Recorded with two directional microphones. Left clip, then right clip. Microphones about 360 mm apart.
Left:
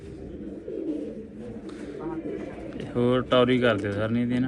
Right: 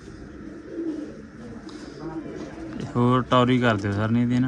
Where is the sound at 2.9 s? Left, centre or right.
Centre.